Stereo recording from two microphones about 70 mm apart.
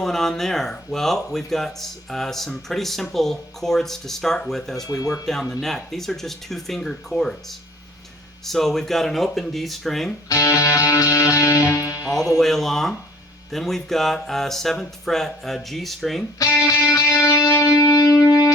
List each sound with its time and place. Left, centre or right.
0.0 s speech: centre
4.9 s speech: left
5.2 s speech: centre
8.4 s speech: centre
10.2 s music: left
12.4 s speech: centre
16.6 s music: left